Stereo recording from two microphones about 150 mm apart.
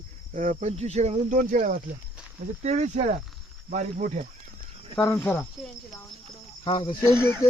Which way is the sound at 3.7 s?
60° right (ahead or behind).